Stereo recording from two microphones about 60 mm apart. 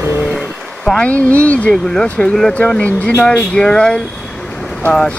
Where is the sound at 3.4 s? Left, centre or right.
Centre.